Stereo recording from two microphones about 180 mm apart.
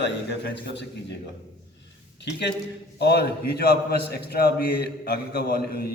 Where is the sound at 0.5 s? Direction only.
75° left (ahead or behind).